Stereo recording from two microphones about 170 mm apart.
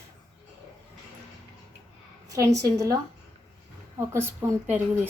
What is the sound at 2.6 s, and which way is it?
A woman's voice, 20° right (ahead or behind).